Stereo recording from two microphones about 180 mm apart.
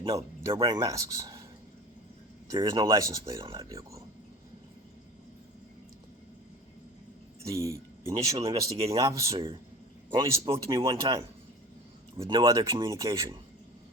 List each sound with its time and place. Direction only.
0.0 s speech: 20° right (ahead or behind)
2.5 s speech: 20° right (ahead or behind)
7.4 s speech: 15° right (ahead or behind)